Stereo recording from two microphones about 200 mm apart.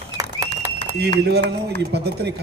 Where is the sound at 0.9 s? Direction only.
55° right (ahead or behind).